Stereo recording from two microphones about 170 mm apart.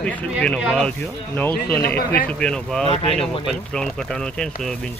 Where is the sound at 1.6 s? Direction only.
65° left (ahead or behind).